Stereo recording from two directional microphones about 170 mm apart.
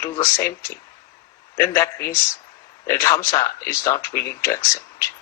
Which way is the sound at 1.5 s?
15° left (ahead or behind).